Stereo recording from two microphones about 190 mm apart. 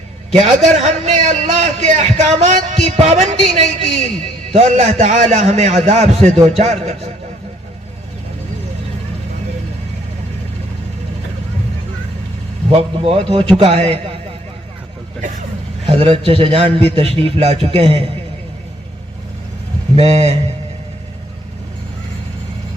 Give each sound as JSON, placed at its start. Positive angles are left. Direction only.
{"t": 0.3, "sound": "a man's voice", "side_deg": -35}
{"t": 12.7, "sound": "a man's voice", "side_deg": -30}
{"t": 15.9, "sound": "a man's voice", "side_deg": -30}
{"t": 20.0, "sound": "a man's voice", "side_deg": -35}